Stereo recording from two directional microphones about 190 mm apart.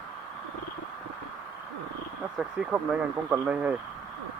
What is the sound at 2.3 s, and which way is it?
Speech, 5° right (ahead or behind).